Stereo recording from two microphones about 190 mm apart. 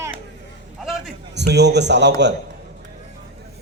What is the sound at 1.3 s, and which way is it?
Speech, 65° right (ahead or behind).